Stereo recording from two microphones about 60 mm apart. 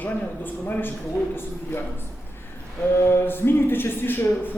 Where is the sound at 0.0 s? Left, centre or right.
Left.